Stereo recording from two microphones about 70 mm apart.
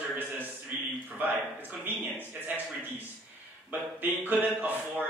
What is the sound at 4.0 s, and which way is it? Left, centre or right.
A man's voice, right.